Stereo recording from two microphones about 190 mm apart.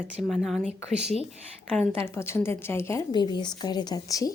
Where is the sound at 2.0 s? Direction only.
15° left (ahead or behind).